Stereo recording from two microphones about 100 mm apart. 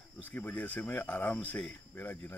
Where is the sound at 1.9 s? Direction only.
20° left (ahead or behind).